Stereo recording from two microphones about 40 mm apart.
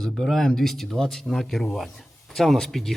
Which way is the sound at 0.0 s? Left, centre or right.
Centre.